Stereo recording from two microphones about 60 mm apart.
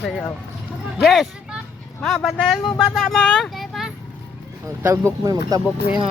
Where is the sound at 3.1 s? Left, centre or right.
Centre.